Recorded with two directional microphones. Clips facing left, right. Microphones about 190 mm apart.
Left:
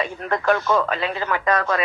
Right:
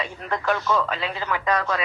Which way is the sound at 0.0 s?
50° left (ahead or behind).